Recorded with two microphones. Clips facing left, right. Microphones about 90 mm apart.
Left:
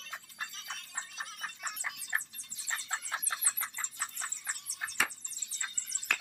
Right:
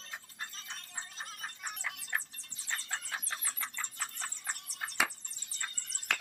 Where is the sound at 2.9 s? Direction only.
35° left (ahead or behind).